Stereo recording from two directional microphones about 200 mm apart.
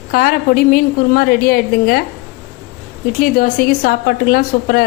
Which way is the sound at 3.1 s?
45° left (ahead or behind).